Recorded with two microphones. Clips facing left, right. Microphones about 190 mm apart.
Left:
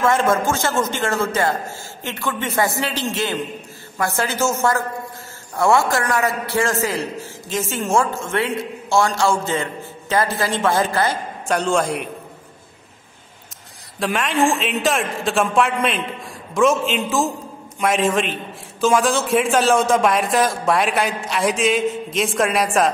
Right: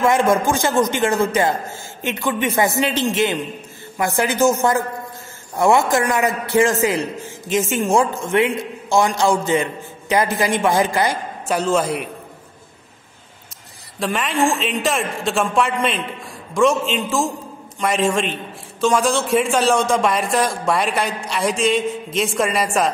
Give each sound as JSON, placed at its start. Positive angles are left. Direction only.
{"t": 0.0, "sound": "a man's voice", "side_deg": -15}
{"t": 11.4, "sound": "a man's voice", "side_deg": -5}
{"t": 13.9, "sound": "a man's voice", "side_deg": 0}